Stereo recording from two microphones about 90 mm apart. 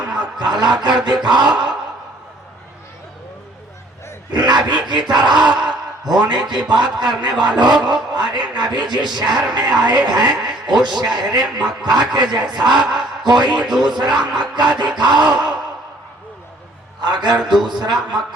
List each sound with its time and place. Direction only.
0.2 s a sound: 55° right (ahead or behind)
4.3 s a man's voice: 50° right (ahead or behind)
17.0 s a man's voice: 50° right (ahead or behind)